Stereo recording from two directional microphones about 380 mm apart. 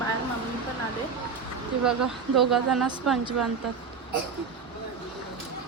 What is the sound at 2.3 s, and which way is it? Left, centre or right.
Speech, centre.